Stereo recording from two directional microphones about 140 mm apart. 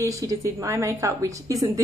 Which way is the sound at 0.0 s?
25° right (ahead or behind).